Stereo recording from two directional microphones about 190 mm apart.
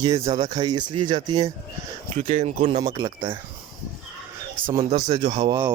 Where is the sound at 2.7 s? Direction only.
20° right (ahead or behind).